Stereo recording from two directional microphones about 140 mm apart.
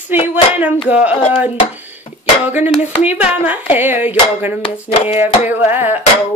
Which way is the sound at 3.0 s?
10° right (ahead or behind).